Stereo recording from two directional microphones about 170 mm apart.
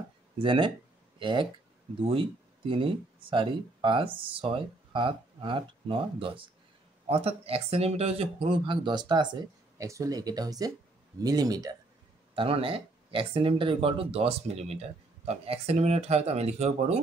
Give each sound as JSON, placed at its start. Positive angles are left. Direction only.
{"t": 0.4, "sound": "speech", "side_deg": -30}
{"t": 12.4, "sound": "speech", "side_deg": -30}